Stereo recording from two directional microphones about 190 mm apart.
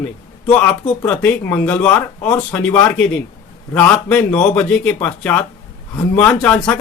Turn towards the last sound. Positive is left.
turn(degrees=10)  # may be behind; listen again after turning